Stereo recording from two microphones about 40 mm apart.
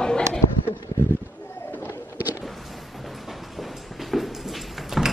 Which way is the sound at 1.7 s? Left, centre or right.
Left.